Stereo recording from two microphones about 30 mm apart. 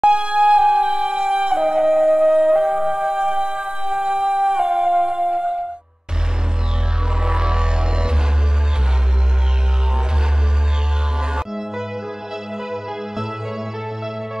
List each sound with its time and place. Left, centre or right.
0.0 s music: right
1.8 s music: right
7.2 s music: right
11.1 s music: right